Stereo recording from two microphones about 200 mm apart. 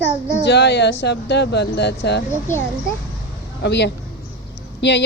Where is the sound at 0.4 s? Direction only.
60° left (ahead or behind).